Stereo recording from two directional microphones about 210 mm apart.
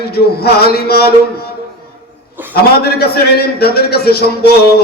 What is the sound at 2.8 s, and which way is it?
A man's voice, 50° left (ahead or behind).